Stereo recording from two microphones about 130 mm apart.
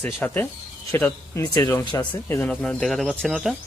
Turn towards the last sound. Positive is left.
turn(degrees=0)  # may be behind; listen again after turning